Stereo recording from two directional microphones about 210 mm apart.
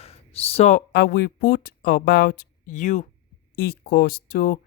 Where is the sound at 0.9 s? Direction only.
45° left (ahead or behind).